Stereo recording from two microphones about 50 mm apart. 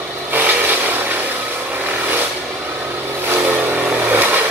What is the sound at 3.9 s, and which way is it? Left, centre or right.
Vehicle, right.